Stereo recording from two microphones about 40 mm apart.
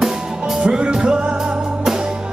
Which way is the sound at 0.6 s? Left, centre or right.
Right.